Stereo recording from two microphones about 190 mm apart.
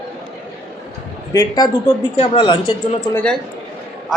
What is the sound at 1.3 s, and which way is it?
Speech, 20° left (ahead or behind).